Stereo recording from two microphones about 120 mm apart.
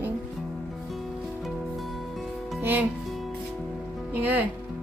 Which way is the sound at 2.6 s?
15° right (ahead or behind).